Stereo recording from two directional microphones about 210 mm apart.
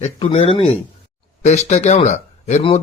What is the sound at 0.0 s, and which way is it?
A man's voice, 30° left (ahead or behind).